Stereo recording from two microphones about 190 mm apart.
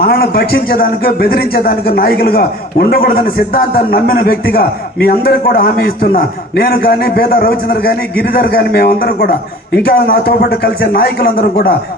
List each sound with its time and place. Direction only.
0.0 s a man's voice: 50° left (ahead or behind)